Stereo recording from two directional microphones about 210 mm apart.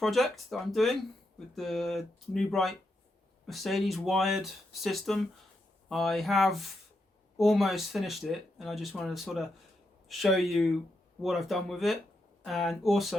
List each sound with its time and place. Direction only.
0.0 s speech: centre (ahead or behind)